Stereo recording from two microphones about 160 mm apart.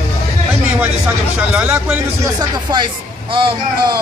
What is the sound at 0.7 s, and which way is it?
A man's voice, 10° right (ahead or behind).